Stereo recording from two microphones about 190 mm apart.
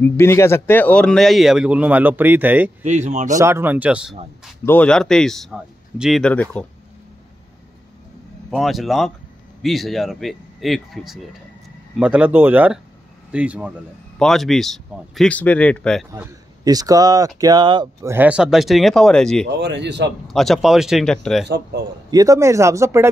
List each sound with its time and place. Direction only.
0.0 s speech: 15° left (ahead or behind); by 2.7 s 10° right (ahead or behind)
2.8 s speech: 35° right (ahead or behind)
3.3 s speech: 15° right (ahead or behind)
4.6 s speech: 5° left (ahead or behind)
8.5 s speech: centre (ahead or behind)
16.1 s speech: 20° right (ahead or behind)
18.1 s speech: 5° right (ahead or behind)
19.6 s speech: 65° right (ahead or behind)
20.2 s speech: centre (ahead or behind)
21.5 s speech: 60° right (ahead or behind)
22.1 s speech: 15° right (ahead or behind)